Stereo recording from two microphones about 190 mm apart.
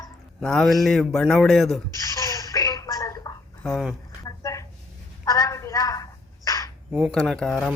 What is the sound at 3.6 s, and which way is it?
Speech, centre (ahead or behind).